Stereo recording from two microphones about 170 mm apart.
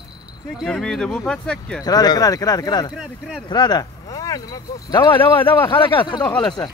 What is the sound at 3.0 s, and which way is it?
Speech, 5° right (ahead or behind).